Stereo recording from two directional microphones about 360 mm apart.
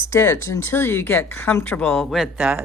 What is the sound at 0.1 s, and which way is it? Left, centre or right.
A woman's voice, centre.